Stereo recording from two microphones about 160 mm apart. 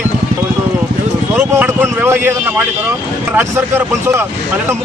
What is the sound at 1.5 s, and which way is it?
Speech, 10° right (ahead or behind).